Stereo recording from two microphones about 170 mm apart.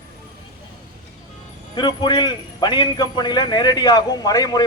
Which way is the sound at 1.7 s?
25° left (ahead or behind).